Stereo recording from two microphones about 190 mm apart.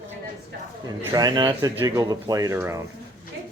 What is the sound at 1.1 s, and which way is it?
Speech, 20° right (ahead or behind).